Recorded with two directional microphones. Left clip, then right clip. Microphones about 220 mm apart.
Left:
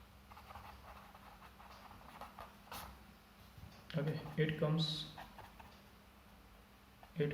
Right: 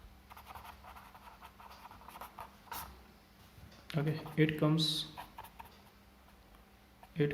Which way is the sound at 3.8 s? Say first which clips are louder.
Right 4 dB; 50° right (ahead or behind).